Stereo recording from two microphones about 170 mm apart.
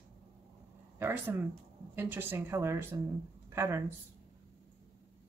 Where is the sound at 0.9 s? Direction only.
15° right (ahead or behind).